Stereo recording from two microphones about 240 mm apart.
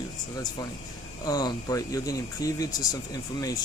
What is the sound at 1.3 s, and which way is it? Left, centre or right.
Speech, centre.